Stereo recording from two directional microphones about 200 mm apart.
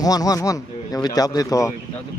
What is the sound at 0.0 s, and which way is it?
A man's voice, 20° left (ahead or behind).